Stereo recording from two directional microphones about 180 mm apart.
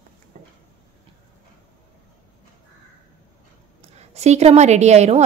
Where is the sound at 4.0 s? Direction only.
40° right (ahead or behind).